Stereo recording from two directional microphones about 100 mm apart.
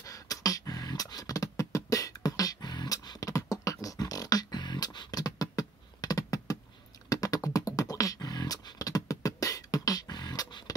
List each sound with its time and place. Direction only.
0.0 s beatboxing: 35° left (ahead or behind)